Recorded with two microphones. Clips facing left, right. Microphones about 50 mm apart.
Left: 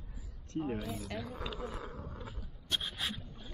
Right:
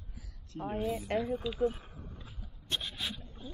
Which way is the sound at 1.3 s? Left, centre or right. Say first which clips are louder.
Right 9 dB; left.